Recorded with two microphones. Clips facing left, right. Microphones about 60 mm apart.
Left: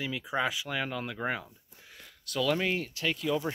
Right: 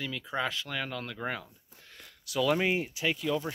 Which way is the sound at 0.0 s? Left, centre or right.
Centre.